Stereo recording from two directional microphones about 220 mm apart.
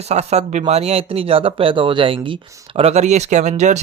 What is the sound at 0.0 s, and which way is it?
Speech, 30° right (ahead or behind).